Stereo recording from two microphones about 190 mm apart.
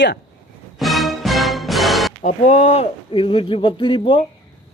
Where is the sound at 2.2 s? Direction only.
40° left (ahead or behind).